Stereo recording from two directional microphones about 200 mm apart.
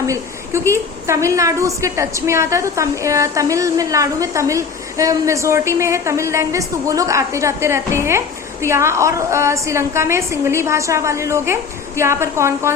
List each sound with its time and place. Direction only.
0.1 s a woman's voice: 15° right (ahead or behind)